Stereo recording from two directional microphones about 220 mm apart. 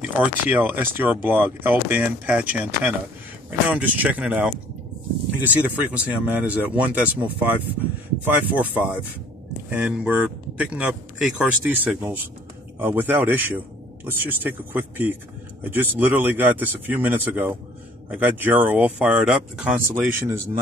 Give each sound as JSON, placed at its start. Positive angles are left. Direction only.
{"t": 0.0, "sound": "speech", "side_deg": -5}
{"t": 9.7, "sound": "speech", "side_deg": -5}